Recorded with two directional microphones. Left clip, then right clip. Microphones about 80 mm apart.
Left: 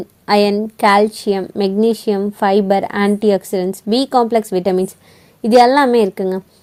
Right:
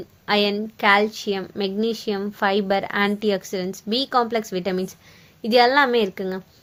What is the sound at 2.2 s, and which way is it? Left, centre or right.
A woman's voice, left.